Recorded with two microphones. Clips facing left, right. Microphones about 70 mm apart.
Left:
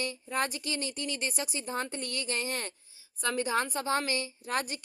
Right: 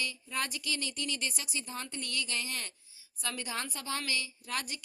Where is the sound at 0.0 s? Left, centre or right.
Left.